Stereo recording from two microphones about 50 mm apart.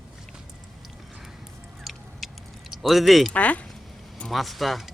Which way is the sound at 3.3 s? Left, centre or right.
Left.